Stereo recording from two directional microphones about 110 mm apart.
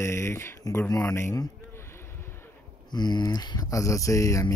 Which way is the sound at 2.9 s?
40° left (ahead or behind).